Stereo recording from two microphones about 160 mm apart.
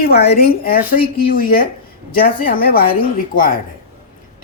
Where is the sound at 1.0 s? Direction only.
65° left (ahead or behind).